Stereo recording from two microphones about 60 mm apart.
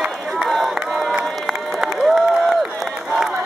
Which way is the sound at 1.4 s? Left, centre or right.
Centre.